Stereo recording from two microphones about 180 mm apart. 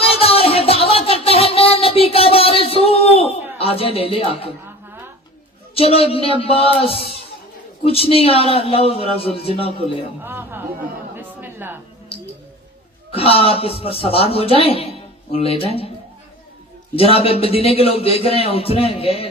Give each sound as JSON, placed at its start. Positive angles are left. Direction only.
{"t": 0.0, "sound": "music", "side_deg": 35}
{"t": 3.6, "sound": "a man's voice", "side_deg": 30}
{"t": 5.7, "sound": "a man's voice", "side_deg": 35}
{"t": 10.2, "sound": "speech", "side_deg": -10}
{"t": 13.1, "sound": "a man's voice", "side_deg": 30}
{"t": 16.9, "sound": "a man's voice", "side_deg": 30}